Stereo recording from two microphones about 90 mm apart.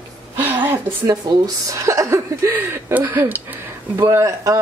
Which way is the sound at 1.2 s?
55° right (ahead or behind).